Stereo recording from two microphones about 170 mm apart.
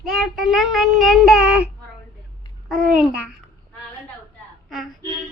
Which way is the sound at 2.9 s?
5° right (ahead or behind).